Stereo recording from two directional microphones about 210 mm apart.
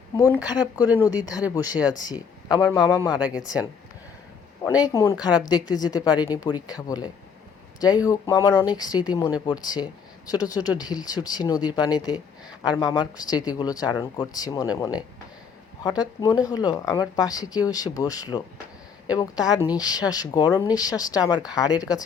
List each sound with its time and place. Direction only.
0.4 s speech: 20° left (ahead or behind)
1.5 s speech: 5° right (ahead or behind)
1.9 s speech: 20° left (ahead or behind)
4.6 s speech: 15° left (ahead or behind)